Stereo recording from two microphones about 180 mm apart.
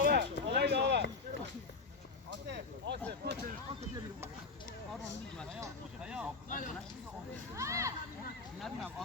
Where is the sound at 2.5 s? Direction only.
75° right (ahead or behind).